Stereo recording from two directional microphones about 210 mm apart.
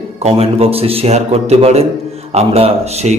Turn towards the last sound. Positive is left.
turn(degrees=-30)  # may be behind; listen again after turning